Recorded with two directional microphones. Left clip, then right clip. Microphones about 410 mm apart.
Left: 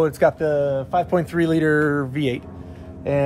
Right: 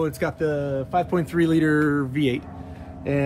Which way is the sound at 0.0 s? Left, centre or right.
Centre.